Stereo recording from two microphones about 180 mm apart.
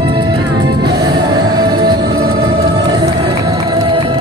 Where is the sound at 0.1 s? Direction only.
25° right (ahead or behind).